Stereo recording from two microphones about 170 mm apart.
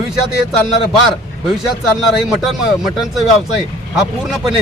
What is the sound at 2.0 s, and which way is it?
Speech, centre (ahead or behind).